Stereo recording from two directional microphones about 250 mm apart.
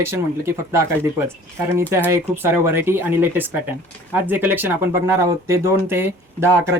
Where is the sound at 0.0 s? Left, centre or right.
Centre.